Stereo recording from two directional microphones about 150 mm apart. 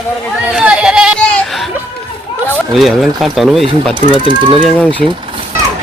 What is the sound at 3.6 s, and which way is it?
Speech, 30° right (ahead or behind).